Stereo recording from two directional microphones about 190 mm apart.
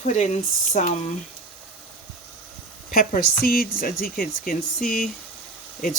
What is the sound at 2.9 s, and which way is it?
Speech, 50° left (ahead or behind).